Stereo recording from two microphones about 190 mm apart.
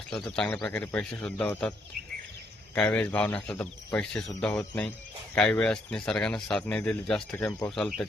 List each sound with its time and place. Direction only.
0.1 s speech: 5° left (ahead or behind)
2.7 s speech: 5° left (ahead or behind)
7.8 s speech: centre (ahead or behind)